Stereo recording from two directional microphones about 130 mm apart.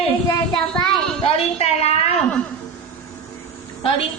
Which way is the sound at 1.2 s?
55° left (ahead or behind).